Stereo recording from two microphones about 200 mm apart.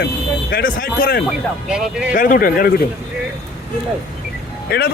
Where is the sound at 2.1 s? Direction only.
45° left (ahead or behind).